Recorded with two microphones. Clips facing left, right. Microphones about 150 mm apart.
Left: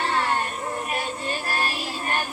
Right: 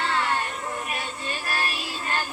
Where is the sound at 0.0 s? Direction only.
20° left (ahead or behind).